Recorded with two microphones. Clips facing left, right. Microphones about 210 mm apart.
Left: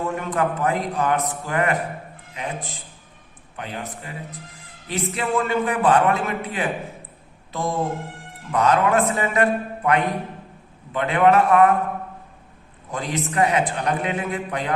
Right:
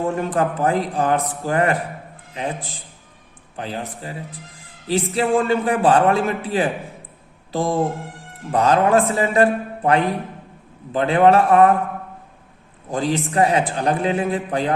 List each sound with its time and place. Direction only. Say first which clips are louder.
0.2 s a man's voice: right 3 dB; 35° right (ahead or behind)
12.9 s a man's voice: right 5 dB; 30° right (ahead or behind)